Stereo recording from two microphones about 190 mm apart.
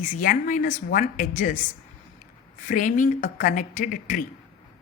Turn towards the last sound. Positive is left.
turn(degrees=45)  # may be behind; listen again after turning